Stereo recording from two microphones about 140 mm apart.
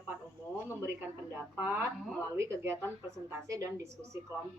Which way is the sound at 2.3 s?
20° right (ahead or behind).